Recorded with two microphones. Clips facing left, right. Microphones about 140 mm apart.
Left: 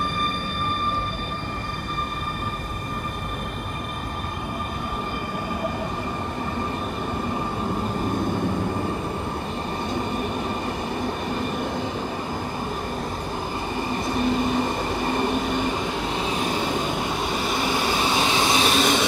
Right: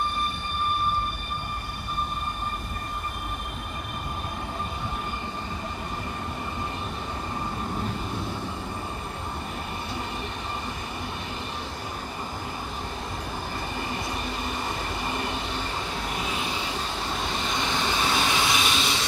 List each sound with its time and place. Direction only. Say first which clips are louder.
16.2 s vehicle: left 7 dB; 35° left (ahead or behind)
16.9 s vehicle: left 5 dB; 5° left (ahead or behind)
18.0 s vehicle: left 2 dB; 20° left (ahead or behind)
18.5 s vehicle: left 6 dB; 40° left (ahead or behind)